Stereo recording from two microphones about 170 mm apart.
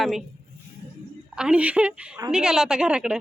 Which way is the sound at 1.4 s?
5° right (ahead or behind).